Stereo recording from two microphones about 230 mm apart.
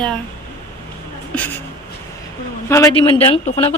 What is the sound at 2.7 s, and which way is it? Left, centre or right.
Speech, centre.